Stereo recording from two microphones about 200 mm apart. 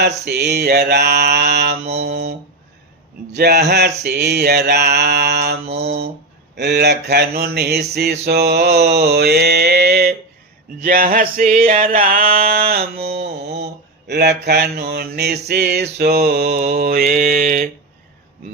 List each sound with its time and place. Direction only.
0.3 s mantra: 55° right (ahead or behind)
1.9 s male singing: 55° right (ahead or behind)
3.3 s mantra: 55° right (ahead or behind)
4.0 s male singing: 55° right (ahead or behind)